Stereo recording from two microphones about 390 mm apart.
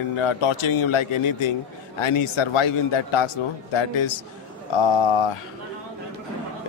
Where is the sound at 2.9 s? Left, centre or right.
Left.